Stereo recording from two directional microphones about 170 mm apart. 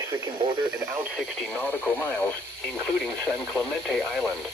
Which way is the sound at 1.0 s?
5° right (ahead or behind).